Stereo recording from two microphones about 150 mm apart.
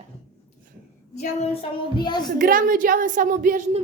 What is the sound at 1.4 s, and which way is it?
Child singing, 35° left (ahead or behind).